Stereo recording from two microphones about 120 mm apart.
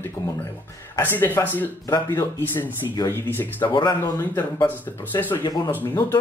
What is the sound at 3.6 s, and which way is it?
Speech, 40° left (ahead or behind).